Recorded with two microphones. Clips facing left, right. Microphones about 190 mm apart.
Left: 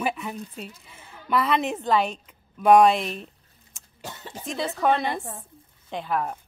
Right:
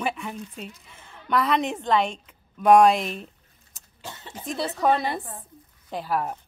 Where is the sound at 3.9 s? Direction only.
45° left (ahead or behind).